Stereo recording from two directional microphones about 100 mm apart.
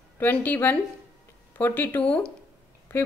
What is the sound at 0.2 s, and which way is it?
Speech, 20° left (ahead or behind).